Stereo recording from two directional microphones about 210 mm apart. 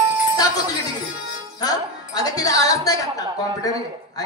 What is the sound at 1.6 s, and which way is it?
Music, 20° left (ahead or behind).